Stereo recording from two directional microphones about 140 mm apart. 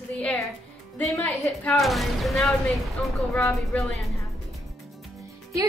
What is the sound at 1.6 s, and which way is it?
A woman's voice, centre (ahead or behind).